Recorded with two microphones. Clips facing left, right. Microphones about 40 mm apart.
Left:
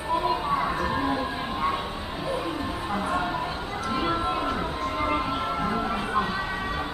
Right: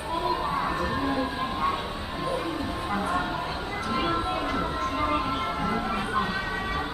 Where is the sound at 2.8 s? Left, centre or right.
Centre.